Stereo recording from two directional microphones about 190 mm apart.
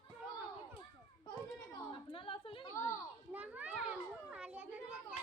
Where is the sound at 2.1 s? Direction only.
25° left (ahead or behind).